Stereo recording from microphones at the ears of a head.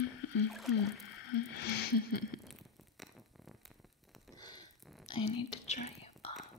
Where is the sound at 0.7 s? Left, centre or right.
Left.